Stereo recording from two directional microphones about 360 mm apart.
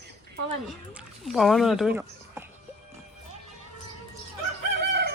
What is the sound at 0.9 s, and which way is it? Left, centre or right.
Speech, centre.